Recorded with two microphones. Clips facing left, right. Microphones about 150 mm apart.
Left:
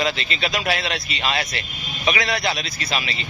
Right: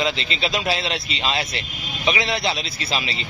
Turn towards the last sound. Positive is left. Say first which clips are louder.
# even
turn(degrees=-30)  # may be behind; listen again after turning